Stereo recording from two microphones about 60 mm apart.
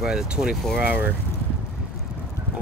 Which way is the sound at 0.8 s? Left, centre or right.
Right.